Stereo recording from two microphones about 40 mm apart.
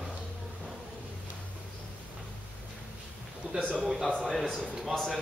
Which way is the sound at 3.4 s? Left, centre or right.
Right.